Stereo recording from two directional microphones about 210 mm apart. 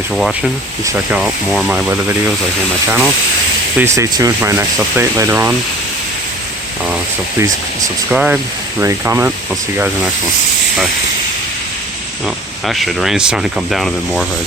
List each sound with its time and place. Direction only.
0.2 s speech: centre (ahead or behind)
3.8 s speech: 15° right (ahead or behind)
7.3 s speech: 15° right (ahead or behind)
8.1 s speech: 5° right (ahead or behind)
12.2 s speech: centre (ahead or behind)